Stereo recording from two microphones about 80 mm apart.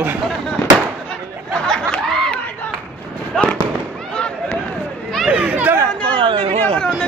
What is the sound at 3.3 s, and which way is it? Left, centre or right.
Fireworks, centre.